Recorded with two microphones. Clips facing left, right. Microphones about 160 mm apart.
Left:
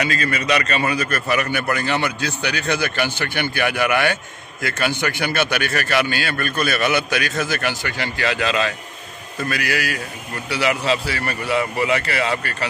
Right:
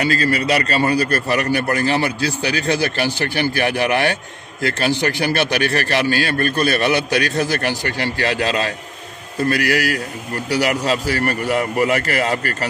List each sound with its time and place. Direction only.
0.0 s a man's voice: 35° right (ahead or behind)